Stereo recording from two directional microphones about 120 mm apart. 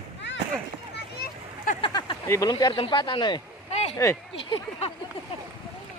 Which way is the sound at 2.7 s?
45° left (ahead or behind).